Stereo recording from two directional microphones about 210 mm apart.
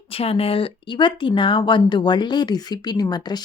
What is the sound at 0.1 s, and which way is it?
Speech, 25° left (ahead or behind).